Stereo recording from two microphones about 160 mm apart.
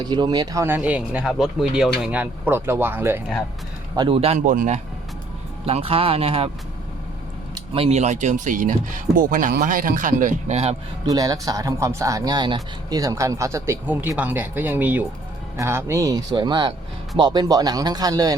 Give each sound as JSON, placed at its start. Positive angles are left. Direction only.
{"t": 0.0, "sound": "speech", "side_deg": -25}
{"t": 3.9, "sound": "speech", "side_deg": -30}
{"t": 5.6, "sound": "speech", "side_deg": -35}
{"t": 7.5, "sound": "speech", "side_deg": -35}
{"t": 11.0, "sound": "speech", "side_deg": -25}